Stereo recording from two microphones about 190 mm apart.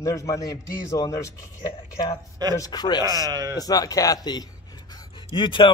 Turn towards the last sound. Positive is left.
turn(degrees=25)  # may be behind; listen again after turning